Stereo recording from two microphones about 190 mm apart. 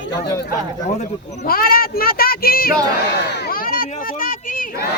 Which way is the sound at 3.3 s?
60° left (ahead or behind).